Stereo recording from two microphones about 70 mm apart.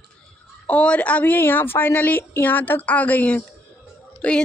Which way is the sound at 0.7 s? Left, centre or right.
Centre.